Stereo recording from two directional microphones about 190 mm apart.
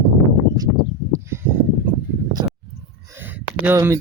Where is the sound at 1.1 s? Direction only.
15° right (ahead or behind).